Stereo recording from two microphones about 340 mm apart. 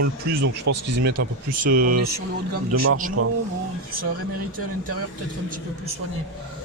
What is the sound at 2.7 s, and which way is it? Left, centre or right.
Speech, right.